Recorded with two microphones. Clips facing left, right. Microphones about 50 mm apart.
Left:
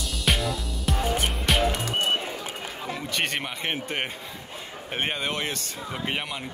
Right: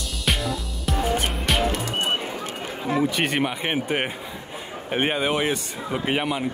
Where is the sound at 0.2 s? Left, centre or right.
Centre.